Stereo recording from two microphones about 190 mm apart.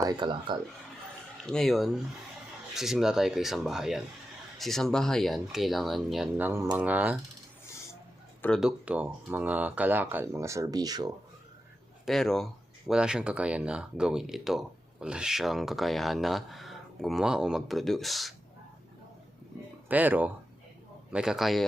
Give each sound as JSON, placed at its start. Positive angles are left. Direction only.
{"t": 0.0, "sound": "speech", "side_deg": -20}
{"t": 1.5, "sound": "speech", "side_deg": 0}
{"t": 8.4, "sound": "speech", "side_deg": 5}
{"t": 12.0, "sound": "speech", "side_deg": 0}
{"t": 19.9, "sound": "speech", "side_deg": -10}